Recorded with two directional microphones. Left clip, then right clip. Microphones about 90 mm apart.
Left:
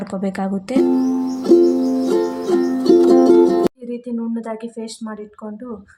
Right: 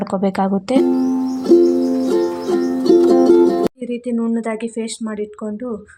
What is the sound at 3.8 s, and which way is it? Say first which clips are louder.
Speech: right 5 dB; 45° right (ahead or behind).